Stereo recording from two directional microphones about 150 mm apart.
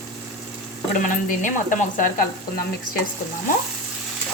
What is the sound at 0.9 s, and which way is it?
Speech, 60° left (ahead or behind).